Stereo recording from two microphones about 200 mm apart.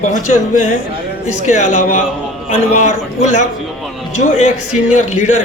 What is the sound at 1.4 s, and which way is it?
A man's voice, 35° left (ahead or behind).